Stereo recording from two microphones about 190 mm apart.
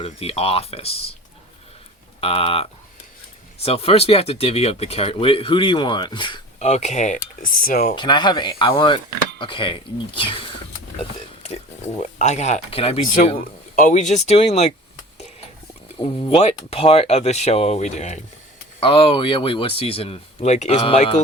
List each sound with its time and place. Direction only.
0.0 s speech: 30° left (ahead or behind)
2.2 s speech: 30° left (ahead or behind)
6.7 s speech: 35° left (ahead or behind)
7.9 s speech: 25° left (ahead or behind)
11.4 s speech: 35° left (ahead or behind)
13.4 s speech: 45° left (ahead or behind)
16.0 s speech: 25° left (ahead or behind)